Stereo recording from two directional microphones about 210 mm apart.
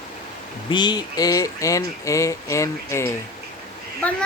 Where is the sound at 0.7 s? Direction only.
20° left (ahead or behind).